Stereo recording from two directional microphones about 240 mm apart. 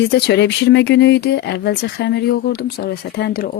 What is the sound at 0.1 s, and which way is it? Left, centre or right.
Speech, left.